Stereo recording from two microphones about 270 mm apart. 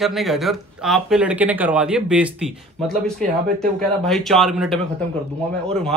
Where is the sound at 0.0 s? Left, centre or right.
Centre.